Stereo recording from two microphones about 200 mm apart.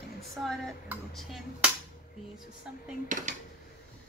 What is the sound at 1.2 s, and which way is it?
Speech, centre (ahead or behind).